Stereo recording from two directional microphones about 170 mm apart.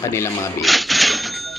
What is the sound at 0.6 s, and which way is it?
Cash register, centre (ahead or behind).